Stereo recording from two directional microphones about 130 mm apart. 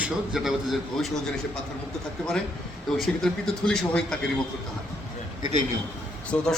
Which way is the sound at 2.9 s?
Centre (ahead or behind).